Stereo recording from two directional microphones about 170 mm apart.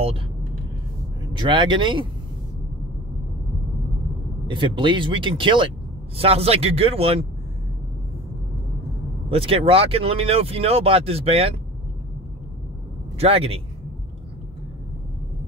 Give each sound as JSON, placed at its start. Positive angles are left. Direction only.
{"t": 1.4, "sound": "speech", "side_deg": -30}
{"t": 4.5, "sound": "speech", "side_deg": -30}
{"t": 9.3, "sound": "speech", "side_deg": -35}
{"t": 13.2, "sound": "speech", "side_deg": -35}